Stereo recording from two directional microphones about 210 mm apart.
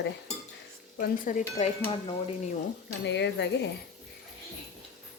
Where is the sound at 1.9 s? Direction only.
25° left (ahead or behind).